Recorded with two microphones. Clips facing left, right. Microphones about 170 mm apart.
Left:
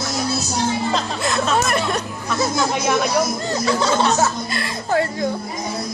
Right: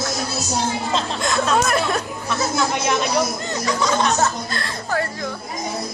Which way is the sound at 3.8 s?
35° left (ahead or behind).